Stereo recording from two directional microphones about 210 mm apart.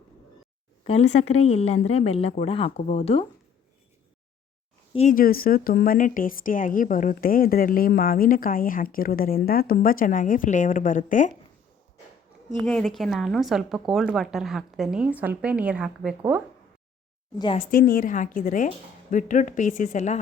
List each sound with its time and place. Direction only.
0.9 s a woman's voice: 30° left (ahead or behind)
4.9 s a woman's voice: 40° left (ahead or behind)
12.6 s a woman's voice: 5° left (ahead or behind)
17.3 s a woman's voice: 25° left (ahead or behind)
17.7 s a woman's voice: 45° left (ahead or behind)